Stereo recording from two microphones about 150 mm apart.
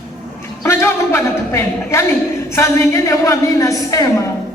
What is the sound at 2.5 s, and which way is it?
A woman's voice, 20° left (ahead or behind).